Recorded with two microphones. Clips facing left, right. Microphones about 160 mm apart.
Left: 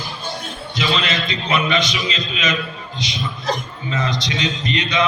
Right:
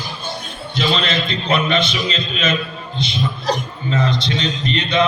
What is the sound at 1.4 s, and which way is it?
A man's voice, 30° right (ahead or behind).